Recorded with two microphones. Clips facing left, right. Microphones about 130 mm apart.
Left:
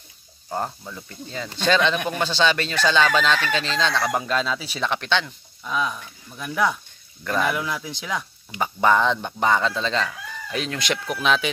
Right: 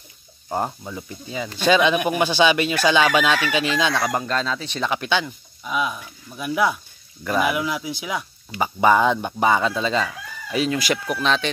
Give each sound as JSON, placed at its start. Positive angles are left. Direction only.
{"t": 0.5, "sound": "speech", "side_deg": -15}
{"t": 4.1, "sound": "speech", "side_deg": 5}